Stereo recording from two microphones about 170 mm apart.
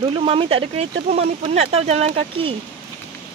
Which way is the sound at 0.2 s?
35° right (ahead or behind).